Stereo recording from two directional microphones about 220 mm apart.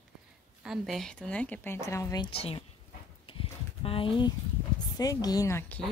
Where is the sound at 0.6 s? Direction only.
Centre (ahead or behind); by 2.6 s 25° left (ahead or behind).